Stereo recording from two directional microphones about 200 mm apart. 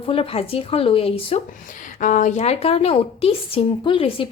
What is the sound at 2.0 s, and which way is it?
A woman's voice, 40° left (ahead or behind).